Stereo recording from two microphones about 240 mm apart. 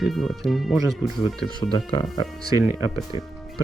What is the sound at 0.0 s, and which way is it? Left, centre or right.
Speech, centre.